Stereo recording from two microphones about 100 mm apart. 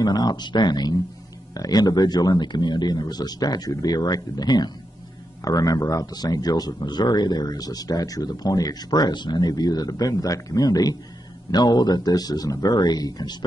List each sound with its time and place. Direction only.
0.0 s speech: 45° left (ahead or behind)